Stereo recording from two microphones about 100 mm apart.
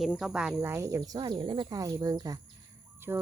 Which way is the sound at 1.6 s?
35° right (ahead or behind).